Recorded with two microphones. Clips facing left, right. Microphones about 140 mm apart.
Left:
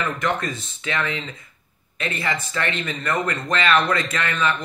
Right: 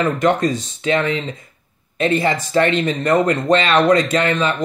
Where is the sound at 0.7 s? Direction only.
40° right (ahead or behind).